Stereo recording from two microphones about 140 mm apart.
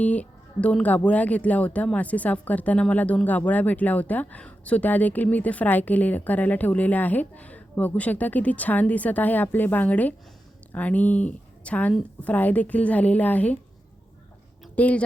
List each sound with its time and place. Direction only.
0.0 s speech: 10° left (ahead or behind)
14.8 s speech: 10° left (ahead or behind)